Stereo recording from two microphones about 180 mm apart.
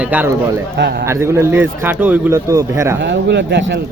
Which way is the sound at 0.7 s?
65° right (ahead or behind).